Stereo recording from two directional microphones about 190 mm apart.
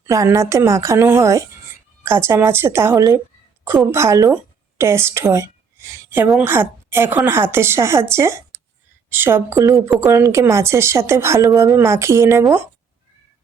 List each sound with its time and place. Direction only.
0.0 s a woman's voice: 15° right (ahead or behind)